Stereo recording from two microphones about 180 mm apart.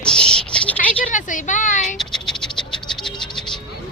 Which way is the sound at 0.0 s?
5° left (ahead or behind).